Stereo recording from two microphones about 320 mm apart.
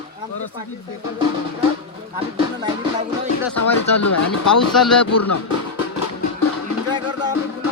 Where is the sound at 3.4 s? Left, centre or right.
Left.